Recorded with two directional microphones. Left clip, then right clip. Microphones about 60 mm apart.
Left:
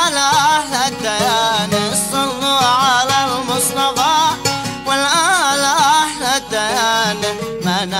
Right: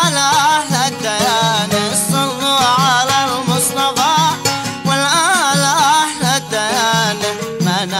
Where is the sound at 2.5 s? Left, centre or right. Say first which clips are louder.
Even; left.